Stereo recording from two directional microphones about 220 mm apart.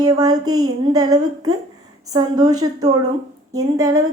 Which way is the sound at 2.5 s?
90° right.